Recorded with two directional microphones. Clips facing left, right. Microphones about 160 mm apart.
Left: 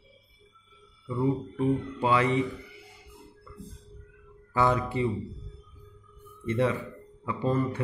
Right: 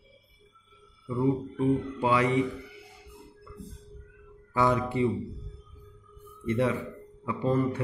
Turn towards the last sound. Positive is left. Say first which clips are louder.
# right 1 dB
turn(degrees=-15)  # may be behind; listen again after turning